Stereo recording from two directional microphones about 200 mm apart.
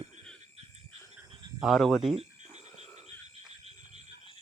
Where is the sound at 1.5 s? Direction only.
Centre (ahead or behind).